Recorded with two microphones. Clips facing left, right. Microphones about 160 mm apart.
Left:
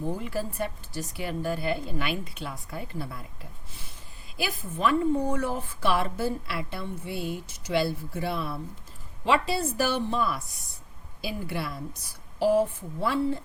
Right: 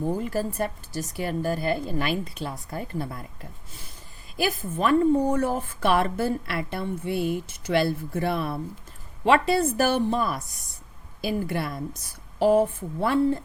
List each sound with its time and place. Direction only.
0.2 s speech: 45° right (ahead or behind)
4.4 s a woman's voice: 50° right (ahead or behind)